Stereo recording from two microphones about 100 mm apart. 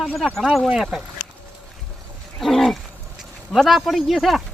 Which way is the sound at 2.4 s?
Centre (ahead or behind).